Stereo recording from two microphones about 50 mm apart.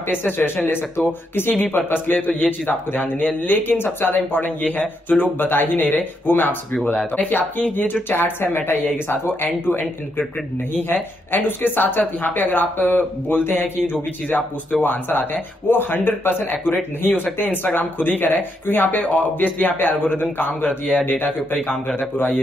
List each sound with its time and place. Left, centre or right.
0.1 s speech: left
6.7 s speech: centre
7.2 s speech: left
9.7 s speech: left
11.3 s speech: left
14.3 s speech: left